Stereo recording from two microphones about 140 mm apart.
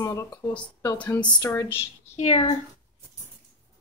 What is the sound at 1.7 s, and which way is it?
Speech, 50° left (ahead or behind).